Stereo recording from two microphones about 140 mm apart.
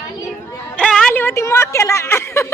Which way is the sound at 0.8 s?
5° left (ahead or behind).